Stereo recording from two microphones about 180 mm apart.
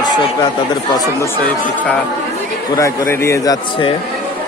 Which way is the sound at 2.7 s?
20° left (ahead or behind).